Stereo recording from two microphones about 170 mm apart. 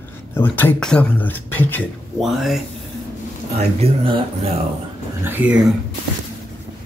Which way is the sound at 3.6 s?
35° right (ahead or behind).